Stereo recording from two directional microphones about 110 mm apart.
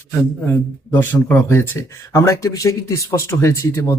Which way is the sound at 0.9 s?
20° left (ahead or behind).